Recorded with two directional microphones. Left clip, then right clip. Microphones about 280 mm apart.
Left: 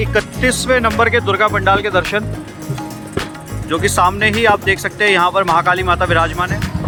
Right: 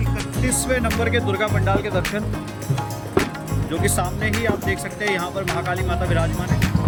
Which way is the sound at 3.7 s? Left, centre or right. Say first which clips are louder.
Left 11 dB; centre.